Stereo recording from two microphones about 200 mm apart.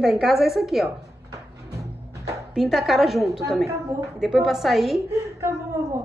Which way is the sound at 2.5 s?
Centre (ahead or behind).